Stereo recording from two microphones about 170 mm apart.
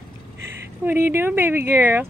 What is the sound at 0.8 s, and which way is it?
Speech, 10° right (ahead or behind).